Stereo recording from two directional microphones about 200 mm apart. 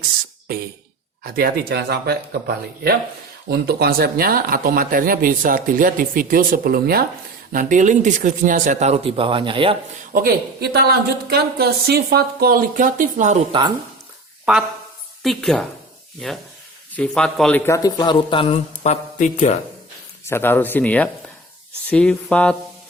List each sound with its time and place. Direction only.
1.2 s speech: 50° right (ahead or behind); by 9.7 s 25° right (ahead or behind)
10.1 s speech: 45° right (ahead or behind)
13.5 s speech: 20° right (ahead or behind)
15.2 s speech: centre (ahead or behind)
17.7 s speech: 20° left (ahead or behind); by 19.5 s 35° left (ahead or behind)
20.2 s speech: 10° left (ahead or behind)